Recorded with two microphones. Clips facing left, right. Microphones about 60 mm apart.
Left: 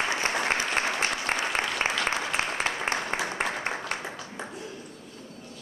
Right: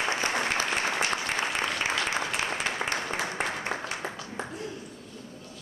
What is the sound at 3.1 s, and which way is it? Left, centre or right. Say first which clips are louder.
Applause: left 2 dB; left.